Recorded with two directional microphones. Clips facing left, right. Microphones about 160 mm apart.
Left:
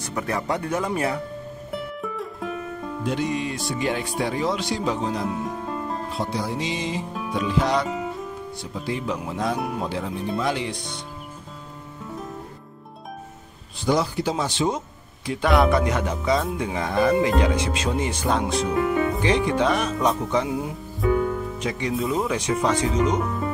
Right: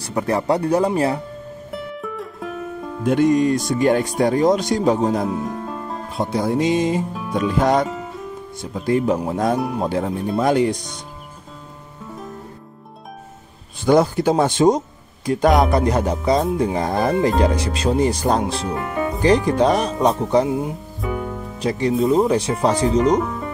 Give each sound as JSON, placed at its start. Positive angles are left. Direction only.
{"t": 0.0, "sound": "speech", "side_deg": -30}
{"t": 1.7, "sound": "music", "side_deg": 0}
{"t": 3.1, "sound": "speech", "side_deg": -50}
{"t": 5.4, "sound": "music", "side_deg": 0}
{"t": 6.1, "sound": "speech", "side_deg": -50}
{"t": 13.8, "sound": "speech", "side_deg": -50}